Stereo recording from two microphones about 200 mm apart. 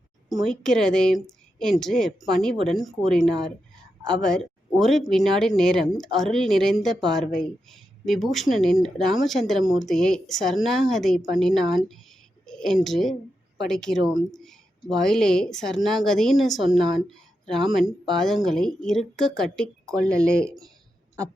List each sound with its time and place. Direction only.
0.3 s speech: centre (ahead or behind)
14.3 s a sound: centre (ahead or behind)
15.5 s speech: centre (ahead or behind)
16.7 s a woman's voice: 20° right (ahead or behind)
17.1 s a sound: centre (ahead or behind)
17.7 s speech: centre (ahead or behind)